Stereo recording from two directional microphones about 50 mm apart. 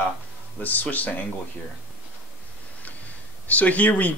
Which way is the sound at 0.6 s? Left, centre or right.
Left.